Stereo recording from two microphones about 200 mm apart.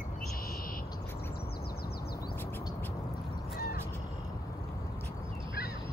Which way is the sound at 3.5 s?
50° left (ahead or behind).